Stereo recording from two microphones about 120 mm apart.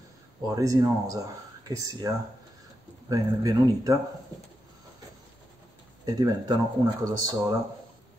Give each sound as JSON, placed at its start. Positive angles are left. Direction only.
{"t": 0.5, "sound": "speech", "side_deg": -30}
{"t": 6.0, "sound": "speech", "side_deg": -35}